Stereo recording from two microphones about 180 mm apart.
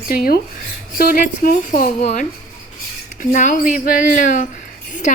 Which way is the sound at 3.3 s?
45° left (ahead or behind).